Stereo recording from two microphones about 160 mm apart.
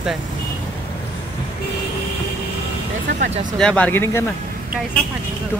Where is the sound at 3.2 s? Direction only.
50° right (ahead or behind).